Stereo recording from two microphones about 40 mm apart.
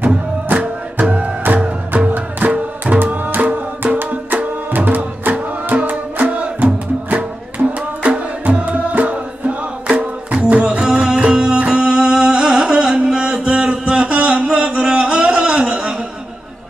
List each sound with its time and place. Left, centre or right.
0.5 s music: right